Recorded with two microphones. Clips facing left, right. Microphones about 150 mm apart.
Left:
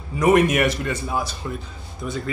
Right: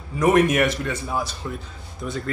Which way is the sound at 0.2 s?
5° left (ahead or behind).